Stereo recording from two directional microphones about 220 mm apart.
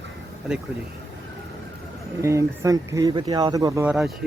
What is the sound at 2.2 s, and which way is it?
Speech, 15° right (ahead or behind).